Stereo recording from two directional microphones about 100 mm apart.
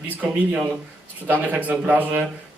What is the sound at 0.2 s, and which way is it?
Speech, 10° right (ahead or behind).